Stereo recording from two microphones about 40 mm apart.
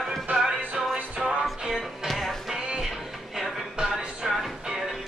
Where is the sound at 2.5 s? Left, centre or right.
Centre.